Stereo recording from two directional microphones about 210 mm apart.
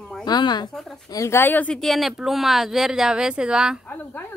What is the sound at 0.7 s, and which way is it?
Speech, centre (ahead or behind).